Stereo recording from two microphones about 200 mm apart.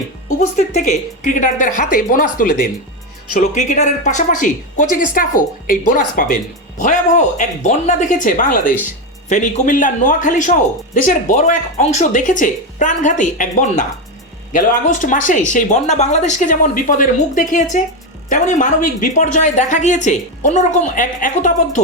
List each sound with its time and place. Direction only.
0.3 s speech: 35° left (ahead or behind)
3.3 s a woman's voice: 35° left (ahead or behind)